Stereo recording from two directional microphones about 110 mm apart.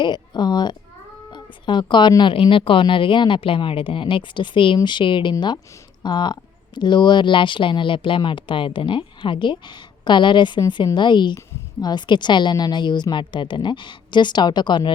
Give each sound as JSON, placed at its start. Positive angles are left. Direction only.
{"t": 0.0, "sound": "a woman's voice", "side_deg": 40}